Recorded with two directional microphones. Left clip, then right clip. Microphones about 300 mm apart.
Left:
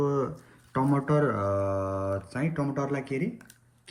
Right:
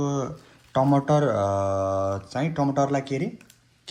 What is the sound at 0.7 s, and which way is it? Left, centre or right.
Speech, centre.